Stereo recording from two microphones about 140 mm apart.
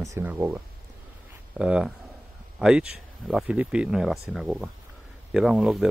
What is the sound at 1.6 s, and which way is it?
Speech, 5° right (ahead or behind).